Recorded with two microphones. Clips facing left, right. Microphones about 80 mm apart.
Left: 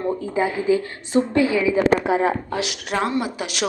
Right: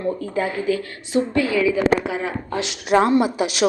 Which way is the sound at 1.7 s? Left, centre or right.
Left.